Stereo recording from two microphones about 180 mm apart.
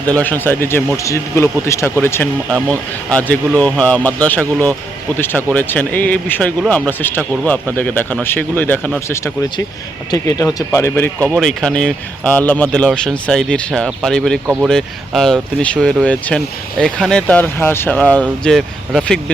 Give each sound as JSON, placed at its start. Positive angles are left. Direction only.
{"t": 0.1, "sound": "speech", "side_deg": 10}
{"t": 2.5, "sound": "speech", "side_deg": -15}
{"t": 3.1, "sound": "speech", "side_deg": 5}
{"t": 11.3, "sound": "speech", "side_deg": 0}
{"t": 14.4, "sound": "speech", "side_deg": -10}
{"t": 14.7, "sound": "speech", "side_deg": 0}